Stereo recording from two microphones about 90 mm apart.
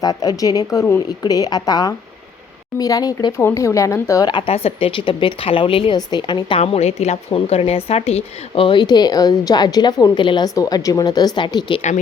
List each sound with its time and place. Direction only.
0.0 s a woman's voice: 45° left (ahead or behind)
3.3 s speech: 30° left (ahead or behind)
4.2 s a woman's voice: 55° left (ahead or behind)
4.4 s a woman's voice: 90° left
6.1 s a woman's voice: 55° left (ahead or behind)
7.3 s a woman's voice: 90° left
8.5 s a woman's voice: 70° left (ahead or behind)
10.5 s a woman's voice: 45° left (ahead or behind); by 11.8 s 60° left (ahead or behind)